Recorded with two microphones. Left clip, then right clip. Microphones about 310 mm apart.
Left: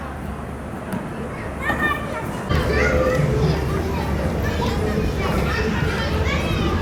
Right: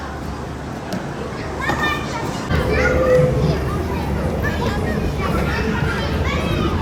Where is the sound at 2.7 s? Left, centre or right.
Centre.